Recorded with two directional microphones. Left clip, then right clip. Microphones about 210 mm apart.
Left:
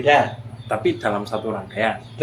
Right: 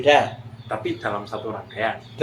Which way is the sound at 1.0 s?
45° left (ahead or behind).